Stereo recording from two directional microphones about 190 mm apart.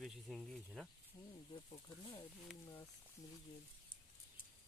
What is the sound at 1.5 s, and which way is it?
Speech, 25° left (ahead or behind).